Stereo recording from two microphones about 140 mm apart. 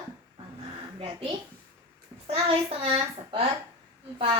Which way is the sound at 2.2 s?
45° right (ahead or behind).